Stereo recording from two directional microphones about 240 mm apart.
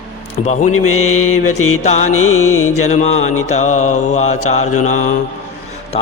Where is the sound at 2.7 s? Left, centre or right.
Left.